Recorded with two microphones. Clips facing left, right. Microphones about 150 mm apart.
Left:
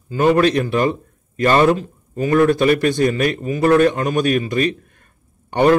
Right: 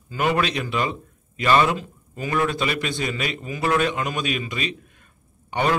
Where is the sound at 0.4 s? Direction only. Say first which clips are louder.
Left 8 dB; 50° left (ahead or behind).